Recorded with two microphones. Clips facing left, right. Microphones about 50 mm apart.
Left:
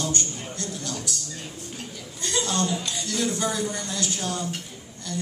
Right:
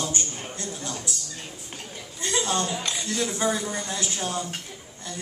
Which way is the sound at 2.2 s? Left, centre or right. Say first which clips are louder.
Even; right.